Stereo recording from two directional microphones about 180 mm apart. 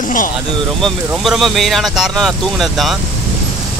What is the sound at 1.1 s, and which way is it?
Speech, centre (ahead or behind).